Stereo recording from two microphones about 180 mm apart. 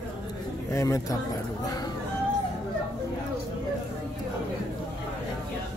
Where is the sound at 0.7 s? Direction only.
20° left (ahead or behind).